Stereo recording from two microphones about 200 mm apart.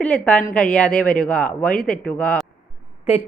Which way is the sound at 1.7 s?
45° left (ahead or behind).